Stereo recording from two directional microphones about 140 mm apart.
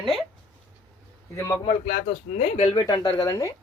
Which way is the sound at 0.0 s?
Centre (ahead or behind).